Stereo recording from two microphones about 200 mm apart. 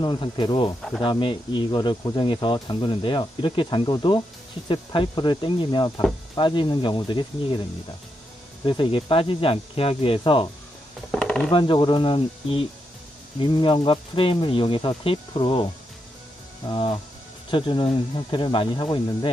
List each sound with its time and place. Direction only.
0.0 s speech: 25° left (ahead or behind)
8.6 s speech: 25° left (ahead or behind)
11.1 s a sound: 5° left (ahead or behind)
11.5 s speech: 25° left (ahead or behind)